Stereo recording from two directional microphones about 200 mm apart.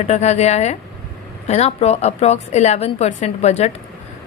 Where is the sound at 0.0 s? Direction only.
35° left (ahead or behind).